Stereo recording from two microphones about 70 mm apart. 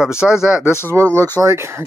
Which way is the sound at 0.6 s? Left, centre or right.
Left.